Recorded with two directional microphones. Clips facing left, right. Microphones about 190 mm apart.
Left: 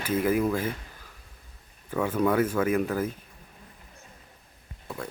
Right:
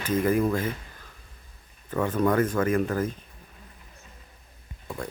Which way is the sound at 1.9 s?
10° left (ahead or behind).